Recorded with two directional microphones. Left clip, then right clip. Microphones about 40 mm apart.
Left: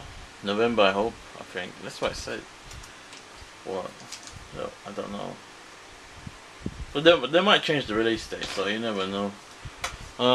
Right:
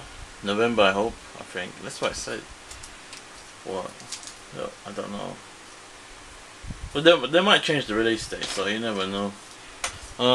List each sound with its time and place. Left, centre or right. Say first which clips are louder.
0.5 s speech: right 1 dB; centre
3.6 s speech: right 1 dB; centre
6.9 s speech: right 1 dB; centre
9.8 s a sound: right 1 dB; centre